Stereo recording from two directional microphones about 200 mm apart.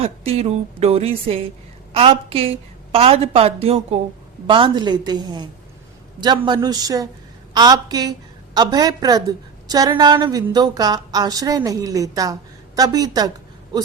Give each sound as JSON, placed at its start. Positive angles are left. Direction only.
{"t": 0.0, "sound": "a woman's voice", "side_deg": -30}